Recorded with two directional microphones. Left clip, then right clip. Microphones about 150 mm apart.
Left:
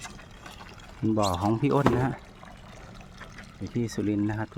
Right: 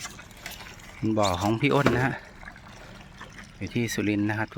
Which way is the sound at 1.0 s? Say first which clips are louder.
Right 1 dB; 15° left (ahead or behind).